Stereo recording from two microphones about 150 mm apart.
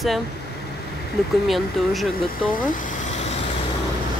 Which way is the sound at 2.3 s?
65° left (ahead or behind).